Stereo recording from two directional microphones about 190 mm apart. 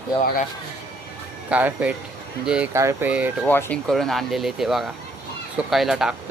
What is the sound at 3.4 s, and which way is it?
Speech, 10° left (ahead or behind).